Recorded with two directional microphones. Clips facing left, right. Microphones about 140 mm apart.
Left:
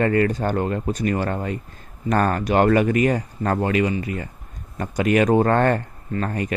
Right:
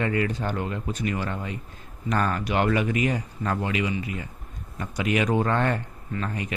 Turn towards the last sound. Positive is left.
turn(degrees=45)  # may be behind; listen again after turning